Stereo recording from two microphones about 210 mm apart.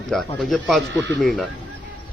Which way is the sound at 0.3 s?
Centre (ahead or behind).